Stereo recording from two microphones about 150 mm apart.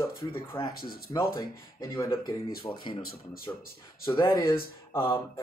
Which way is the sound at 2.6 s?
35° left (ahead or behind).